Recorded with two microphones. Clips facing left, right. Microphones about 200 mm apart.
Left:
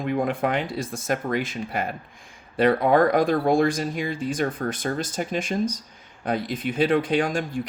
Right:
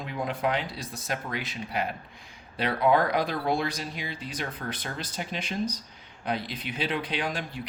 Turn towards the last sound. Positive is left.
turn(degrees=45)  # may be behind; listen again after turning